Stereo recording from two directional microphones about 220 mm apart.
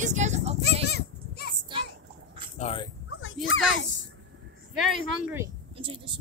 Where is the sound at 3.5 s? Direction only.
60° left (ahead or behind).